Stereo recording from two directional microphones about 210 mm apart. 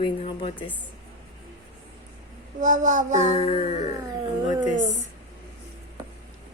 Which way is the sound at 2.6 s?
35° right (ahead or behind).